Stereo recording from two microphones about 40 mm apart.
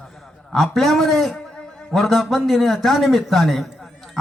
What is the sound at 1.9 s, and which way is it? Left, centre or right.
A man's voice, centre.